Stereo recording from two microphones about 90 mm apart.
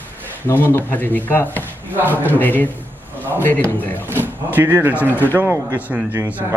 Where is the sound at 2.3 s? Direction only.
20° left (ahead or behind).